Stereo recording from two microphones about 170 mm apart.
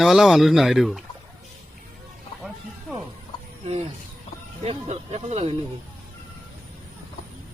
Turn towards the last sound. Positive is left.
turn(degrees=-35)  # may be behind; listen again after turning